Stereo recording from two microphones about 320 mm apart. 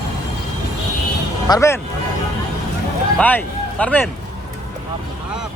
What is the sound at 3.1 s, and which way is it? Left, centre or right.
Speech, centre.